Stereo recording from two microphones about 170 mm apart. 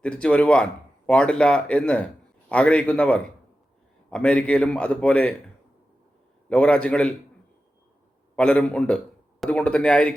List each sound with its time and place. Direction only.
0.0 s speech: 5° left (ahead or behind)
6.5 s speech: 5° left (ahead or behind)
8.4 s speech: 5° left (ahead or behind)